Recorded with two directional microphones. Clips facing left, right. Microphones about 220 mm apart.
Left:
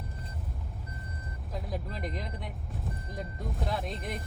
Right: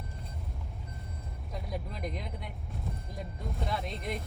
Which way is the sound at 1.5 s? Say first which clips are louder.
Left 2 dB; centre (ahead or behind).